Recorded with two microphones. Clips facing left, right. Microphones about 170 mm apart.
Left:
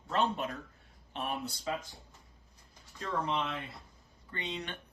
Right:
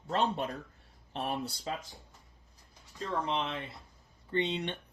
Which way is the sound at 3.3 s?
25° right (ahead or behind).